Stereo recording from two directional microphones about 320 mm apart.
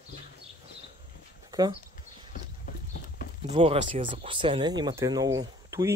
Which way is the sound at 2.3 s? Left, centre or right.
Left.